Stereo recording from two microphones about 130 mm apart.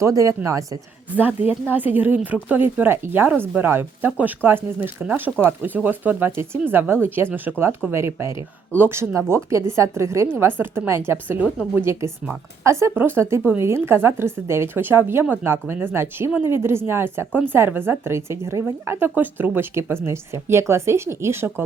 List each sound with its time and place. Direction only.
0.0 s a woman's voice: 25° right (ahead or behind)
1.1 s a woman's voice: 15° right (ahead or behind)